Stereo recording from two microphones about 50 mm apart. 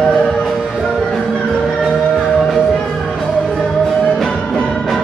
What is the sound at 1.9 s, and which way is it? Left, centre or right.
Music, centre.